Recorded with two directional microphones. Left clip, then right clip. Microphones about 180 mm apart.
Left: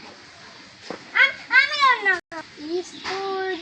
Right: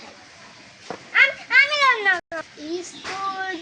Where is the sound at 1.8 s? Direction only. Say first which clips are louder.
Even; 40° right (ahead or behind).